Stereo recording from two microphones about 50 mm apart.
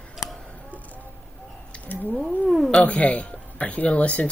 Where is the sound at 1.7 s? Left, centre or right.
Left.